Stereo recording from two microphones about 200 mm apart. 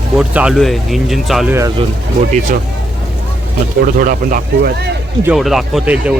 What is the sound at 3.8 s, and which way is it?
Speech, 45° right (ahead or behind).